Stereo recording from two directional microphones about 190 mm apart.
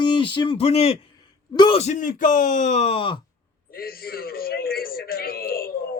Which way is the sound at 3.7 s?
50° left (ahead or behind).